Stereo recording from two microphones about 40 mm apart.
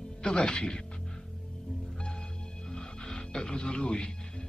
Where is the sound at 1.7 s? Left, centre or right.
Centre.